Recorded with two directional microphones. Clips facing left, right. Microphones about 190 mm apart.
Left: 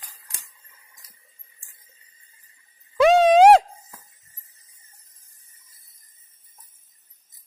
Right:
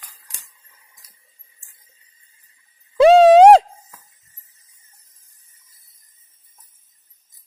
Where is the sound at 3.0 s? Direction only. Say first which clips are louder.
Right 5 dB; 30° right (ahead or behind).